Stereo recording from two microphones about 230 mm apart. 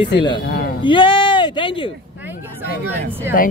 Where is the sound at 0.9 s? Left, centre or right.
Left.